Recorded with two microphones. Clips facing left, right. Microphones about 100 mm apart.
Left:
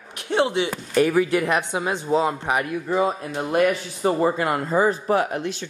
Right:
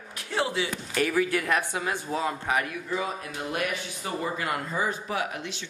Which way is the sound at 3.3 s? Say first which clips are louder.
Left 11 dB; 40° left (ahead or behind).